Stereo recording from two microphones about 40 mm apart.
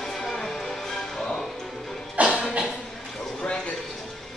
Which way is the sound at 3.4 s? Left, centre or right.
Left.